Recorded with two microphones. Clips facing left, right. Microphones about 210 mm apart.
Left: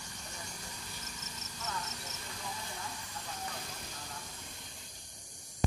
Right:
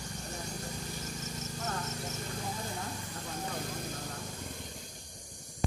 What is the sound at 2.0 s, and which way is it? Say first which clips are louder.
Insect: right 8 dB; 35° right (ahead or behind).